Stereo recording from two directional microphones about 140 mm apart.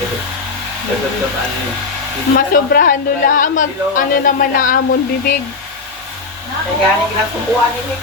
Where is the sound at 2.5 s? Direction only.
85° left.